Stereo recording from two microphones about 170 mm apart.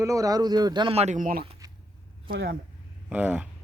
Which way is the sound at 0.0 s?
20° right (ahead or behind).